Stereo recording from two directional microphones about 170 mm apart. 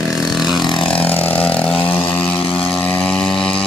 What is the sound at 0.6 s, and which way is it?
Vehicle, 30° left (ahead or behind).